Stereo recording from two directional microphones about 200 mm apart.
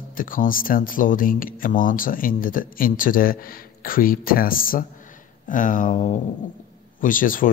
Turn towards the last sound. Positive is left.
turn(degrees=45)  # may be behind; listen again after turning